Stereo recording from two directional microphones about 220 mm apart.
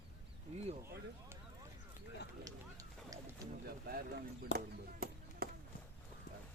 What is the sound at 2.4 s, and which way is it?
Run, 15° right (ahead or behind).